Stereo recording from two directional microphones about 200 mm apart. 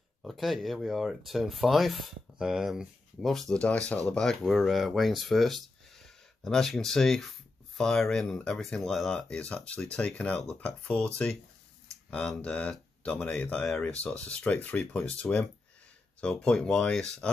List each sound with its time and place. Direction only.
0.2 s speech: centre (ahead or behind)